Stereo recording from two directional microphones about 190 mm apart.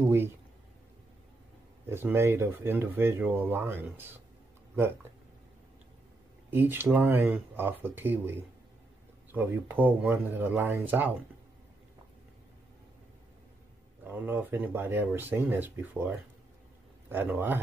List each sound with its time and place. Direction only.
1.9 s speech: 10° right (ahead or behind)
6.5 s speech: 10° right (ahead or behind)
14.0 s speech: 10° right (ahead or behind)